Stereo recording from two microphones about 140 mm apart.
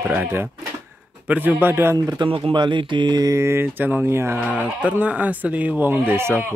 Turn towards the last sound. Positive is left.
turn(degrees=-15)  # may be behind; listen again after turning